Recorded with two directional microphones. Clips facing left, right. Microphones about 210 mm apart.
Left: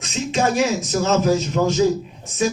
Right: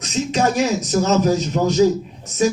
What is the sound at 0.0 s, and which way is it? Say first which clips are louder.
A man's voice: right 2 dB; 40° right (ahead or behind).